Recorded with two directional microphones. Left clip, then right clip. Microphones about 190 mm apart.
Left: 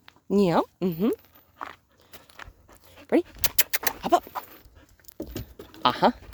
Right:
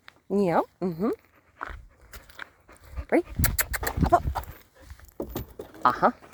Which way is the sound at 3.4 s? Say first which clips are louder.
Left 1 dB; 35° left (ahead or behind).